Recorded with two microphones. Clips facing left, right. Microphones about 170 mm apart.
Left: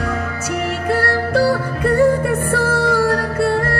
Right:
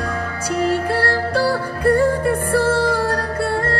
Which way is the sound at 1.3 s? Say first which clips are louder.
Left 3 dB; 25° left (ahead or behind).